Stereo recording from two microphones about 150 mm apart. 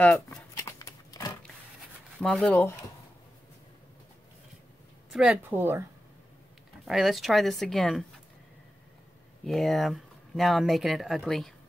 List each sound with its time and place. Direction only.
0.0 s a sound: 10° left (ahead or behind)
0.7 s a sound: 25° left (ahead or behind)
2.1 s speech: 5° left (ahead or behind)
5.1 s speech: 5° right (ahead or behind)
6.9 s speech: centre (ahead or behind)
9.4 s speech: centre (ahead or behind)